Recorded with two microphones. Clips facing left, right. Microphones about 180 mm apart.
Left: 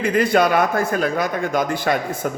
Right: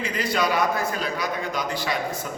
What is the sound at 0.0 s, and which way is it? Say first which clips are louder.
A man's voice: left 8 dB; 55° left (ahead or behind).